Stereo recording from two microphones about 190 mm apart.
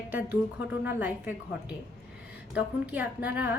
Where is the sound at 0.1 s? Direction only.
10° right (ahead or behind).